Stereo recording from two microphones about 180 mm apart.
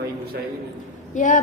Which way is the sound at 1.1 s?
45° left (ahead or behind).